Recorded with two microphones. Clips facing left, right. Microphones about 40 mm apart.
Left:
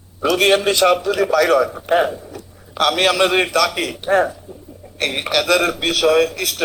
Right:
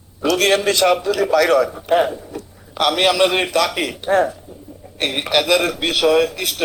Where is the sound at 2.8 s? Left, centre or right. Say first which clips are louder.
Even; centre.